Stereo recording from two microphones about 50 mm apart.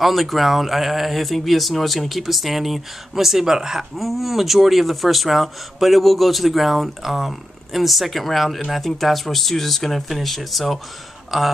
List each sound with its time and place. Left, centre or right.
0.0 s speech: centre